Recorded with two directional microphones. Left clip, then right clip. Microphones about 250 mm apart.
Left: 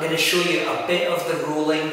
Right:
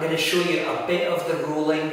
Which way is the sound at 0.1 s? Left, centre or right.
Centre.